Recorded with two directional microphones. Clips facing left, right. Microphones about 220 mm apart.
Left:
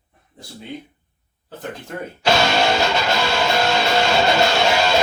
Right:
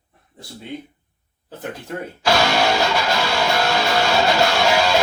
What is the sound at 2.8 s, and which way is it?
Music, 20° left (ahead or behind).